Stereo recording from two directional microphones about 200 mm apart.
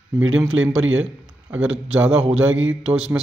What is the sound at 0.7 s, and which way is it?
Speech, 80° right.